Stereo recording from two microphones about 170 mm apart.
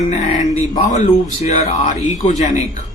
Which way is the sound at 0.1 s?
40° left (ahead or behind).